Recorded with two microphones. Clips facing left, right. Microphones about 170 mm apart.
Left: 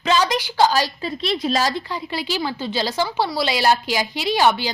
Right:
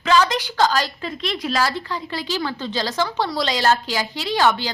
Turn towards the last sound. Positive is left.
turn(degrees=15)  # may be behind; listen again after turning